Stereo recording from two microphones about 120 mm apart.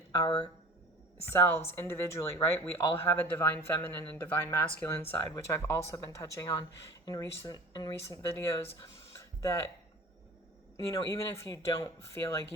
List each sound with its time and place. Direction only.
0.1 s speech: 35° left (ahead or behind)
1.3 s speech: 20° left (ahead or behind)
9.1 s music: 25° left (ahead or behind)
10.8 s speech: 25° left (ahead or behind)